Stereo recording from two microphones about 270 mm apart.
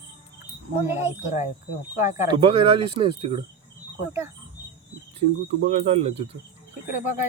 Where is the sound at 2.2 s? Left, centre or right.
Centre.